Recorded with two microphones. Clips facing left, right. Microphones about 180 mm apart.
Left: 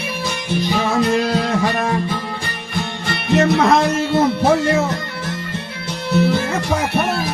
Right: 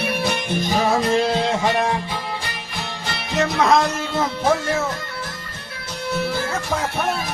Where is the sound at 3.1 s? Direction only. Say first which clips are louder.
Left 7 dB; 60° left (ahead or behind).